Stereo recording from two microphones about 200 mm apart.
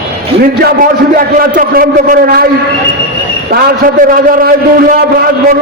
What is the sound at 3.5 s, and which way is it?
A man's voice, 45° right (ahead or behind).